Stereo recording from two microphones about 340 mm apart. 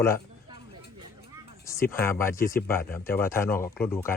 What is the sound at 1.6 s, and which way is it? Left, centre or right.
Speech, centre.